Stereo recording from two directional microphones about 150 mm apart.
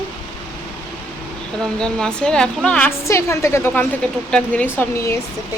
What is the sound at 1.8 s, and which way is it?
Speech, 5° left (ahead or behind).